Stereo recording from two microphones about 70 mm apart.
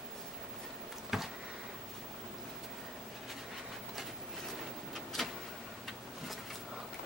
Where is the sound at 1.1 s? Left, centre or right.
Centre.